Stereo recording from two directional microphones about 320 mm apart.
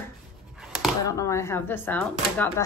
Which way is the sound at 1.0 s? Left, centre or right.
Centre.